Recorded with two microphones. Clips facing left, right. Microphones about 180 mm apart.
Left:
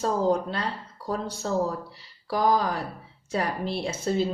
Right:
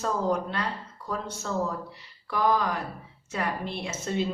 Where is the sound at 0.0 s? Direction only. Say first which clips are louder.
Left 3 dB; 30° left (ahead or behind).